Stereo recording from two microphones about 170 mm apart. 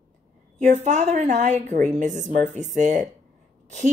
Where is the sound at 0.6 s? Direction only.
45° right (ahead or behind).